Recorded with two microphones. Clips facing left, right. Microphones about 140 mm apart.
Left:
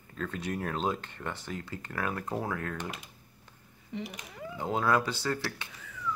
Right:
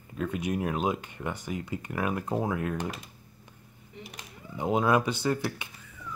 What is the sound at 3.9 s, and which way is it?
Speech, 90° left.